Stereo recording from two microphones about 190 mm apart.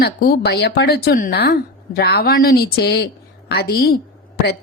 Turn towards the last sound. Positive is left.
turn(degrees=55)  # may be behind; listen again after turning